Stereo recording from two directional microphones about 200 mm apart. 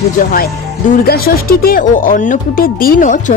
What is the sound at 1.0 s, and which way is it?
Speech, 50° left (ahead or behind).